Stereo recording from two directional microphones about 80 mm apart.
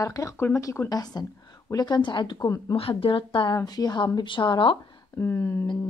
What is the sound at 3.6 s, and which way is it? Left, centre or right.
Speech, left.